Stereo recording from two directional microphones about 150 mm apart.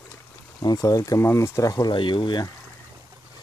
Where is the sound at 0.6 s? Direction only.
25° left (ahead or behind).